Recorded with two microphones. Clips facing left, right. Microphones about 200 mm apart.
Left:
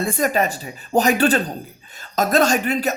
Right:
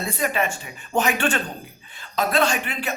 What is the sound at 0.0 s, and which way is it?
Speech, 45° left (ahead or behind).